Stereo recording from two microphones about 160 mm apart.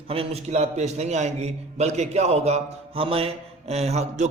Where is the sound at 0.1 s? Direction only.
40° right (ahead or behind).